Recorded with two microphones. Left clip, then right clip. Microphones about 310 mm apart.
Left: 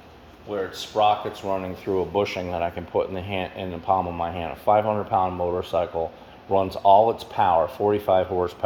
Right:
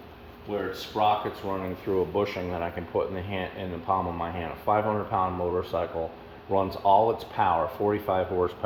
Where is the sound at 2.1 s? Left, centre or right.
Left.